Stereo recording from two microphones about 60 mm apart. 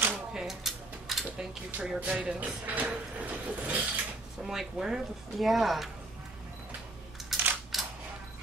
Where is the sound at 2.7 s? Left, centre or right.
Right.